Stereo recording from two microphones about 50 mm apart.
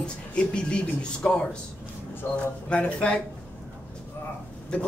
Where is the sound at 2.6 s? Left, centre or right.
Left.